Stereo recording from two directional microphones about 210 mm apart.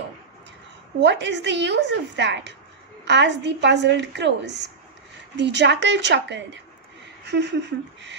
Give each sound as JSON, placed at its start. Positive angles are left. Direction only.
{"t": 1.0, "sound": "a woman's voice", "side_deg": -55}